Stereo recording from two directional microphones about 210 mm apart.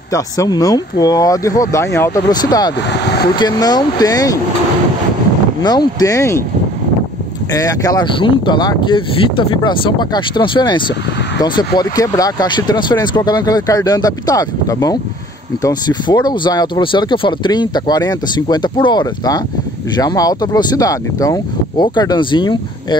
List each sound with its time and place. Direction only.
0.1 s speech: 15° left (ahead or behind)
2.9 s speech: 50° left (ahead or behind)
3.3 s speech: 20° left (ahead or behind)
5.6 s speech: 20° left (ahead or behind)
7.5 s speech: 15° left (ahead or behind)